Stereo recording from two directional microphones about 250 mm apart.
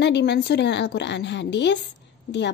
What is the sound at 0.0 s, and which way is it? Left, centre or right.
A woman's voice, left.